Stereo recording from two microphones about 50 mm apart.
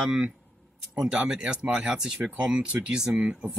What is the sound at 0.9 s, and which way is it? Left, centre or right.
Speech, centre.